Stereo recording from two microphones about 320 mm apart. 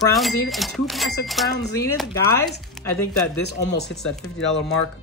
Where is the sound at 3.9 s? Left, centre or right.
Centre.